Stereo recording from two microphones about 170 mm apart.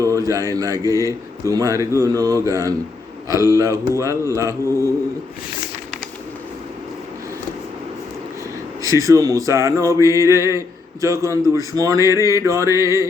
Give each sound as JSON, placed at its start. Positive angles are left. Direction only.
{"t": 0.0, "sound": "music", "side_deg": -20}
{"t": 1.0, "sound": "speech", "side_deg": -20}
{"t": 8.8, "sound": "speech", "side_deg": -20}